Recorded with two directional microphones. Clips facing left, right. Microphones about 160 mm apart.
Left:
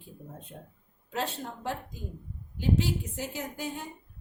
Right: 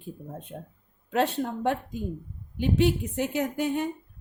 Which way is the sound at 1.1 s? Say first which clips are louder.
Right 8 dB; 60° right (ahead or behind).